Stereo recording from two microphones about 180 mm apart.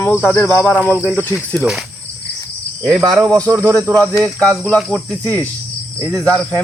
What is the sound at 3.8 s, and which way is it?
Insect, 5° left (ahead or behind).